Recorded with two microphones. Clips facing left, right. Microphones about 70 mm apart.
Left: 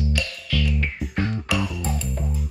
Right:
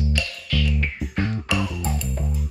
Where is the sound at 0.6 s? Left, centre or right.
Centre.